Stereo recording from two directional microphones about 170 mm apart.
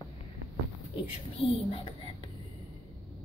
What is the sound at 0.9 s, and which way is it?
Speech, 30° left (ahead or behind).